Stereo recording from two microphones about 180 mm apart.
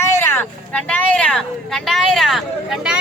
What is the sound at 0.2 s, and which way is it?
Speech, 10° left (ahead or behind).